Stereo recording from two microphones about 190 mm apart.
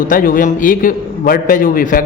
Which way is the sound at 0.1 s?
45° left (ahead or behind).